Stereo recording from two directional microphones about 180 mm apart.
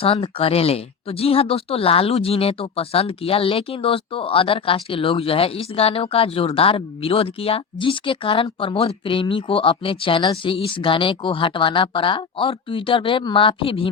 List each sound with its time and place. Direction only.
0.0 s speech: 30° left (ahead or behind)